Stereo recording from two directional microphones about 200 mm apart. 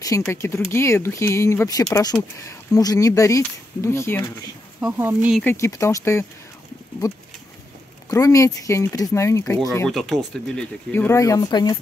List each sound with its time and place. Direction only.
0.3 s speech: 15° left (ahead or behind)
4.7 s speech: 10° right (ahead or behind)
5.4 s speech: 10° left (ahead or behind)
9.8 s speech: centre (ahead or behind); by 11.8 s 20° left (ahead or behind)